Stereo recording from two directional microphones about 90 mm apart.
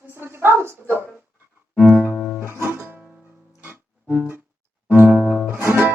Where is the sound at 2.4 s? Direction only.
25° right (ahead or behind).